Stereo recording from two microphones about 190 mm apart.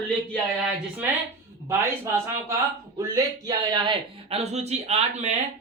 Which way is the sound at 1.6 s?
15° right (ahead or behind).